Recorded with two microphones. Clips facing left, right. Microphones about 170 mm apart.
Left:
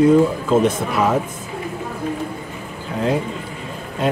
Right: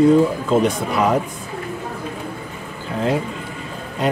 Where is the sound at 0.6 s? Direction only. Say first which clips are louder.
Even; centre (ahead or behind).